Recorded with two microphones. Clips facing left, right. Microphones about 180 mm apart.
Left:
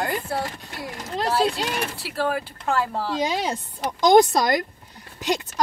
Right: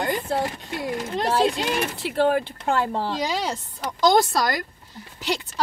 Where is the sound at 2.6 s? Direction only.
25° right (ahead or behind).